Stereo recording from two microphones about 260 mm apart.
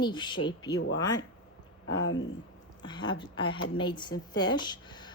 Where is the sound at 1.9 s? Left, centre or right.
Left.